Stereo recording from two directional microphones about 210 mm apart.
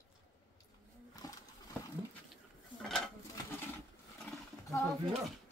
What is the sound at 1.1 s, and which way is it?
Pigeon, 15° left (ahead or behind).